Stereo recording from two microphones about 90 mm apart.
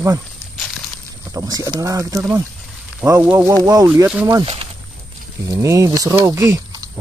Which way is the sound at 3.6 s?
45° right (ahead or behind).